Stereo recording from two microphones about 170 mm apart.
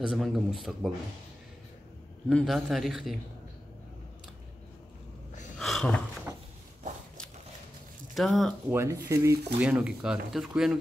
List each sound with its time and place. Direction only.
0.1 s speech: centre (ahead or behind)
2.2 s speech: centre (ahead or behind)
5.6 s a sound: centre (ahead or behind)
8.1 s speech: centre (ahead or behind)
8.6 s speech: 15° right (ahead or behind)
9.6 s speech: 5° right (ahead or behind)